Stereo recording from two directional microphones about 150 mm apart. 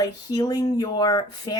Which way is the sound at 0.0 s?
25° left (ahead or behind).